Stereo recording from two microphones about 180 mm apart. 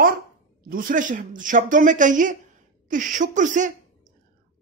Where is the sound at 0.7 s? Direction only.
50° right (ahead or behind).